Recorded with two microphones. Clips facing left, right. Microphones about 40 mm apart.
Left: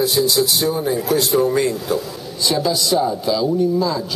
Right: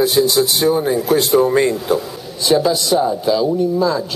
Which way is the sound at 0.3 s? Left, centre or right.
Right.